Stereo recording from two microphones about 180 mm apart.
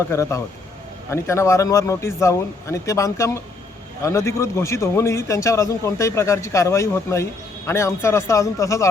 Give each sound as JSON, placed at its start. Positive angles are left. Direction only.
{"t": 0.1, "sound": "a man's voice", "side_deg": 15}